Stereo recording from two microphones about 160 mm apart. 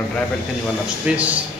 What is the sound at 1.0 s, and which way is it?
Speech, 10° right (ahead or behind).